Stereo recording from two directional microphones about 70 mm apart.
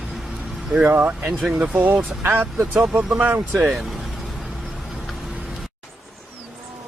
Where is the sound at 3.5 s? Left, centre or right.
Centre.